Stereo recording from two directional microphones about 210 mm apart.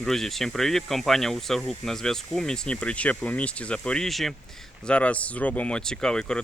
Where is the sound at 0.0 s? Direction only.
Centre (ahead or behind).